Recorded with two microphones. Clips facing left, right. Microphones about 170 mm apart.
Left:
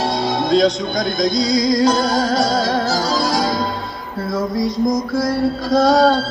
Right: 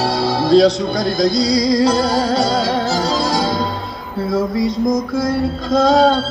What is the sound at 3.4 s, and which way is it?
Music, centre (ahead or behind).